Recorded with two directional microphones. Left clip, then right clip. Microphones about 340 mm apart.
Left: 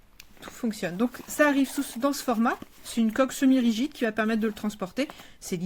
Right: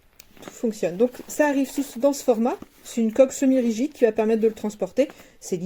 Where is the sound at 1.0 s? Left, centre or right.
Left.